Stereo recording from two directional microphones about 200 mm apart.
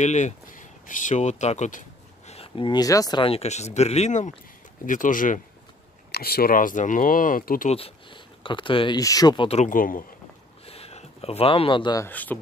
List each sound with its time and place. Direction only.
0.0 s speech: 35° left (ahead or behind)
7.7 s speech: 25° left (ahead or behind); by 10.0 s 45° left (ahead or behind)
10.6 s speech: 30° left (ahead or behind); by 12.4 s 10° left (ahead or behind)